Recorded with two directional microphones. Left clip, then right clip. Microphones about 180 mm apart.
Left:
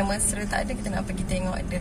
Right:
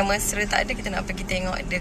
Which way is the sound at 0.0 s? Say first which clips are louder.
Right 5 dB; 20° left (ahead or behind).